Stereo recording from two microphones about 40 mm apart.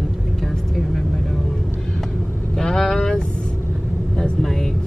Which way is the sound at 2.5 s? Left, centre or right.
Centre.